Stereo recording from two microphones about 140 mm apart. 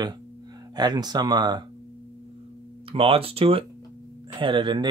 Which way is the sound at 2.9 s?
40° right (ahead or behind).